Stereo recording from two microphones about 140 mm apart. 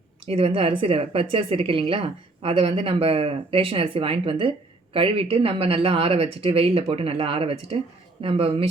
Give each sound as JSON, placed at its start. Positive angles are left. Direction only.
{"t": 0.3, "sound": "speech", "side_deg": -45}